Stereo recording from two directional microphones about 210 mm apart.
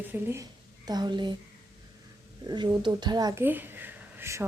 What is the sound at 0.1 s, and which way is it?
Speech, 10° right (ahead or behind).